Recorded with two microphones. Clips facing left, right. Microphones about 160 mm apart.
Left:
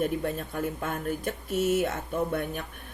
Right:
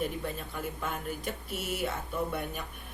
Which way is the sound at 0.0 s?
50° left (ahead or behind).